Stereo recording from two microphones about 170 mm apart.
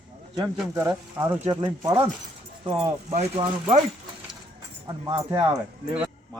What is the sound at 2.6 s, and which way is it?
Speech, 35° right (ahead or behind).